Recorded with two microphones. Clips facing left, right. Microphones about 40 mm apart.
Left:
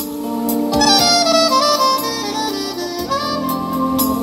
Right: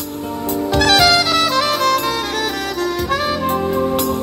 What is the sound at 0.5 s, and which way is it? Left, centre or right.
Music, right.